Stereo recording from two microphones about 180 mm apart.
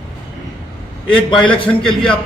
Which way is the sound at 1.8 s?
5° left (ahead or behind).